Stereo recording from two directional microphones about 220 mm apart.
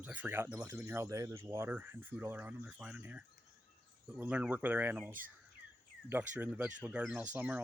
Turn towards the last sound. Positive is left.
turn(degrees=-5)  # may be behind; listen again after turning